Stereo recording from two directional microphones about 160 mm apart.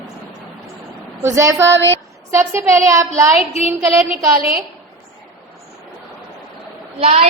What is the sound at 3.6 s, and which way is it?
Speech, 40° left (ahead or behind).